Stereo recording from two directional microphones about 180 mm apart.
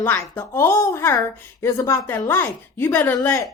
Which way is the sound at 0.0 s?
10° left (ahead or behind).